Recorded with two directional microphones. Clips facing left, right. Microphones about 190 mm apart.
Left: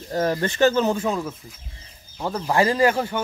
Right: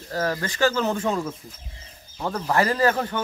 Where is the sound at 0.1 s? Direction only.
20° left (ahead or behind).